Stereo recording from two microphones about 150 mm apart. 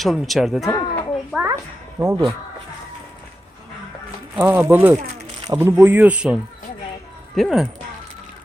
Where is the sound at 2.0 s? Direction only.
20° right (ahead or behind).